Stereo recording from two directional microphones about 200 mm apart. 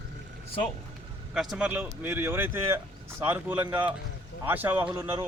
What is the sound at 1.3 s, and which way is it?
Speech, centre (ahead or behind).